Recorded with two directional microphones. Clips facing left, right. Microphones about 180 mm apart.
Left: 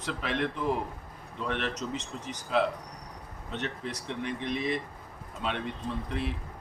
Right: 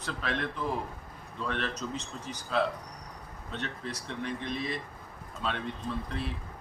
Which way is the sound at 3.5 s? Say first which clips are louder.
Left 2 dB; 20° left (ahead or behind).